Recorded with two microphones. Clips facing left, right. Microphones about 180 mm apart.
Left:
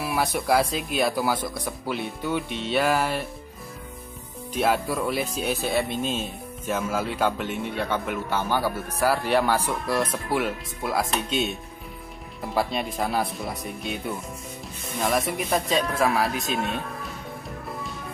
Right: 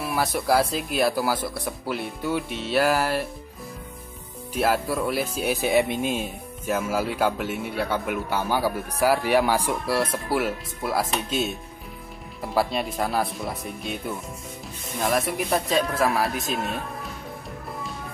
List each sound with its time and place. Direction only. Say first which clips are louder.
0.0 s speech: even; centre (ahead or behind)
4.6 s speech: even; 5° right (ahead or behind)
5.6 s speech: right 6 dB; 15° right (ahead or behind); by 17.1 s centre (ahead or behind)